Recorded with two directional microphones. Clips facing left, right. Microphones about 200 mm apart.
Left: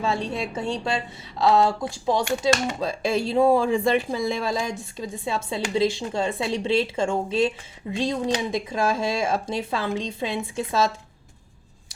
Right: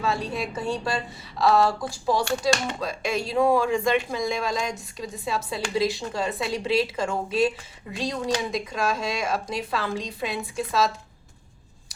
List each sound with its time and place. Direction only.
0.0 s speech: 25° left (ahead or behind)